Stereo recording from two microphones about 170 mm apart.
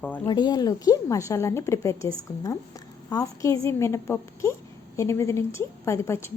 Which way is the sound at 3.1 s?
20° left (ahead or behind).